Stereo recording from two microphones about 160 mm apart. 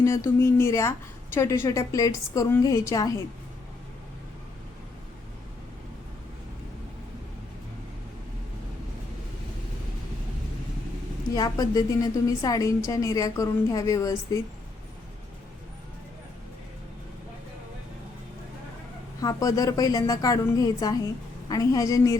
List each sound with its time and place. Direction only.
0.0 s a woman's voice: 15° left (ahead or behind)
11.3 s a woman's voice: 25° left (ahead or behind)
19.2 s a woman's voice: 20° left (ahead or behind)